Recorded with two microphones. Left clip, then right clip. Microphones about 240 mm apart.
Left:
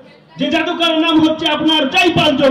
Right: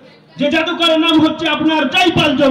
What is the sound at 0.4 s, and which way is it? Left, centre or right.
A man's voice, right.